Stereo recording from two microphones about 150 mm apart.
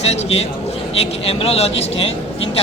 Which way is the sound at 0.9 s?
40° left (ahead or behind).